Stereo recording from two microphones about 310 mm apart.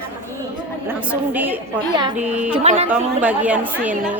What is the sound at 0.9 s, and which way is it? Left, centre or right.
Speech, centre.